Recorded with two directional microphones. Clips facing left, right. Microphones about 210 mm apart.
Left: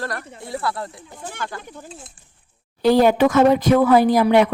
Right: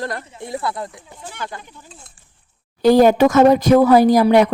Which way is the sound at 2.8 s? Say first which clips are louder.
Right 3 dB; 45° right (ahead or behind).